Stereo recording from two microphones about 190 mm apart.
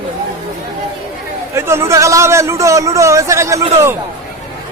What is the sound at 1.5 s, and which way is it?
A man's voice, 15° right (ahead or behind).